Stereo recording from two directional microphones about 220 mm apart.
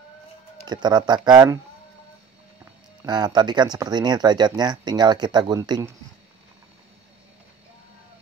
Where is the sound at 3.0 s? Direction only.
20° right (ahead or behind).